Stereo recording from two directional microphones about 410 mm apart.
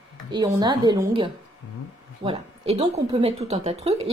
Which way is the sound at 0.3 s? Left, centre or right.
Centre.